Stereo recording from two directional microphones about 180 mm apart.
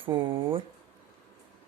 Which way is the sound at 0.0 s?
30° right (ahead or behind).